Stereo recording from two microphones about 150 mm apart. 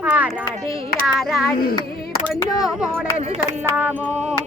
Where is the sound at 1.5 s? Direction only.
85° left.